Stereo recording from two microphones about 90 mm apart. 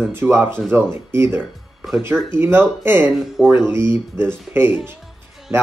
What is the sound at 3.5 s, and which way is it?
Speech, 25° right (ahead or behind).